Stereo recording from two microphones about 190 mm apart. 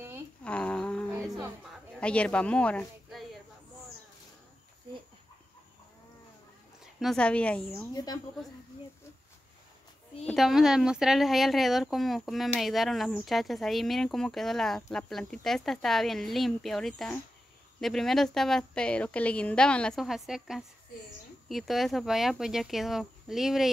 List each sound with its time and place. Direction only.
0.4 s a sound: 5° left (ahead or behind)
2.0 s speech: 5° left (ahead or behind)
6.8 s speech: centre (ahead or behind)
7.9 s a woman's voice: 20° left (ahead or behind)
10.2 s speech: centre (ahead or behind)